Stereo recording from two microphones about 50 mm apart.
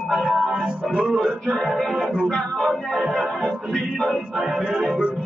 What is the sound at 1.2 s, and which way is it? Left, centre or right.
Music, centre.